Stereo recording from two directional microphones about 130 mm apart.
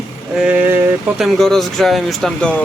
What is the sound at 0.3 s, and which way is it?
Speech, 10° right (ahead or behind).